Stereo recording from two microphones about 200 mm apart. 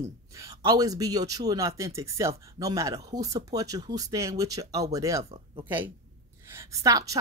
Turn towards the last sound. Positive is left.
turn(degrees=-15)  # may be behind; listen again after turning